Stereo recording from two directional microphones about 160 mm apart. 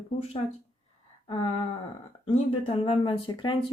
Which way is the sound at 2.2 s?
35° left (ahead or behind).